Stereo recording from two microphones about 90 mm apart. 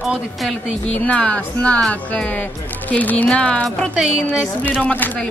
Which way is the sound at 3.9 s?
5° right (ahead or behind).